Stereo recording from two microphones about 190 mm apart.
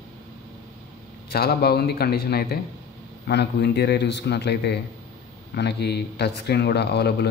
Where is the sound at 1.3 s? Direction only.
55° left (ahead or behind).